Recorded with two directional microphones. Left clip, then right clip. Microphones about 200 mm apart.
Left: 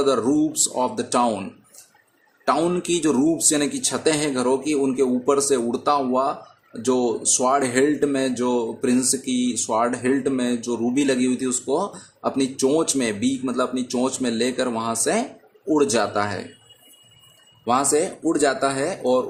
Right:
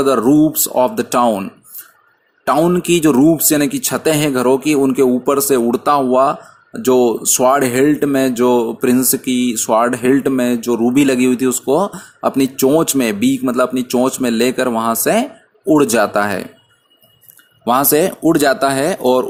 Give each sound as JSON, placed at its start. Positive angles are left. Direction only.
{"t": 0.0, "sound": "speech", "side_deg": -30}
{"t": 17.7, "sound": "speech", "side_deg": -40}